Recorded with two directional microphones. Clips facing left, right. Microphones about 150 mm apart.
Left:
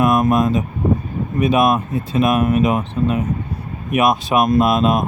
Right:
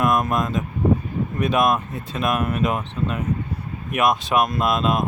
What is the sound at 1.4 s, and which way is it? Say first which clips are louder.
Speech: left 5 dB; 10° left (ahead or behind).